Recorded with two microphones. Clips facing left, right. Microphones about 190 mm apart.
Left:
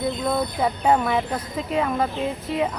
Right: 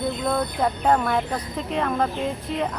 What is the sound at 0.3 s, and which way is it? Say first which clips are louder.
Speech: even; 5° left (ahead or behind).